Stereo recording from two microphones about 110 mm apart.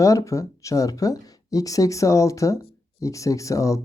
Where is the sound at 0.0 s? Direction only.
30° left (ahead or behind).